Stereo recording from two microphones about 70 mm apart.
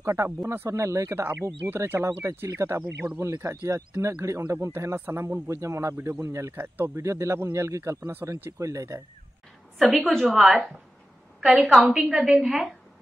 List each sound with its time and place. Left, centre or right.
0.0 s speech: right
7.0 s speech: right
8.0 s speech: right
8.5 s speech: right
9.9 s a woman's voice: centre